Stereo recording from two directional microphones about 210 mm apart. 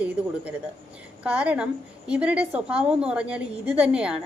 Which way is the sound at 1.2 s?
5° right (ahead or behind).